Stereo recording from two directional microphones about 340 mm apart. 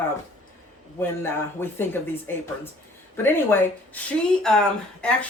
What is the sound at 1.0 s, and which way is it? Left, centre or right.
Speech, centre.